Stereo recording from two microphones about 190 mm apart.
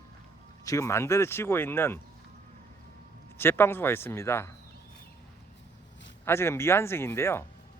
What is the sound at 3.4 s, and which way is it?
Speech, 10° left (ahead or behind).